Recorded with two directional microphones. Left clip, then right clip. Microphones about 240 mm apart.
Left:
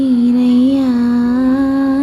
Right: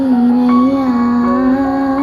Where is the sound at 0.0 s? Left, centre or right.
Centre.